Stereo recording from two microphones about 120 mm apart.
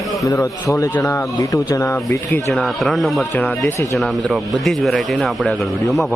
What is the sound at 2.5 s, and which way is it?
A man's voice, 5° left (ahead or behind).